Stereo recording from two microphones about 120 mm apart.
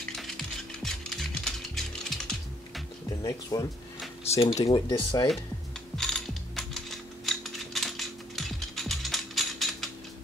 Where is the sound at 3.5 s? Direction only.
35° left (ahead or behind).